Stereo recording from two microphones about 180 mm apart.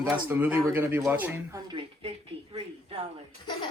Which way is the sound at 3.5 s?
25° left (ahead or behind).